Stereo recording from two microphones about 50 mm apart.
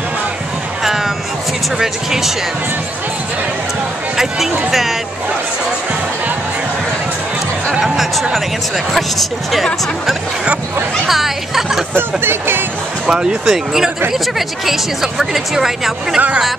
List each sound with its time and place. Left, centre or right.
0.8 s music: centre
1.8 s speech: centre
4.2 s speech: centre
7.8 s speech: centre
11.1 s speech: centre
11.9 s speech: right
13.0 s speech: centre